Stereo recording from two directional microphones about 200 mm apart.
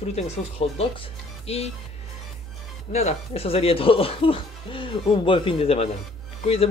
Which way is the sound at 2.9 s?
30° left (ahead or behind).